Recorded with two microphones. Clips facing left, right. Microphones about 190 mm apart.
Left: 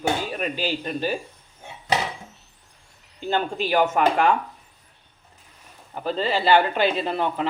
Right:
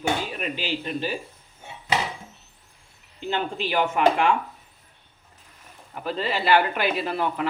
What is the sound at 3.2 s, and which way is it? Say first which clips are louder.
Speech: left 3 dB; 45° left (ahead or behind).